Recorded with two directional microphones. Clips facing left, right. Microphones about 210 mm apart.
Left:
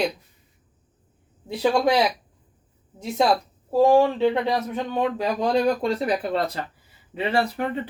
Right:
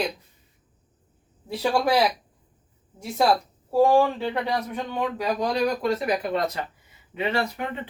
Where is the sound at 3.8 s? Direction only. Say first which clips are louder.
Left 2 dB; 20° left (ahead or behind).